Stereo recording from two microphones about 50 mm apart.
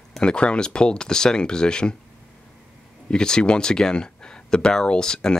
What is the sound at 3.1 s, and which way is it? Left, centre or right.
Speech, centre.